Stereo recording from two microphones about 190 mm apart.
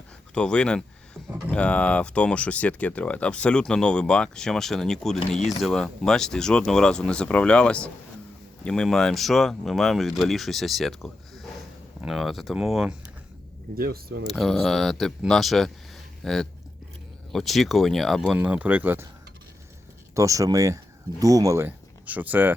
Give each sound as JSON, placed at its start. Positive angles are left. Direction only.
{"t": 0.3, "sound": "speech", "side_deg": 5}
{"t": 13.7, "sound": "speech", "side_deg": -50}
{"t": 14.3, "sound": "speech", "side_deg": 0}
{"t": 20.1, "sound": "speech", "side_deg": -15}